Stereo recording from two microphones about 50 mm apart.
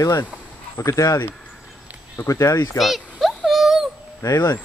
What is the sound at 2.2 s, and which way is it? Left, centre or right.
Speech, left.